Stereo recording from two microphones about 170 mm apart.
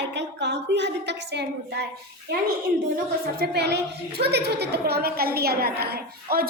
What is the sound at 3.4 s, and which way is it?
A woman's voice, 80° right.